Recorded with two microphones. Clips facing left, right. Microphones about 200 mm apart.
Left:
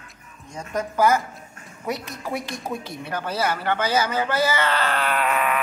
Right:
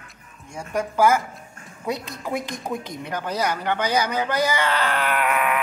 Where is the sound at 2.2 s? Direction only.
15° right (ahead or behind).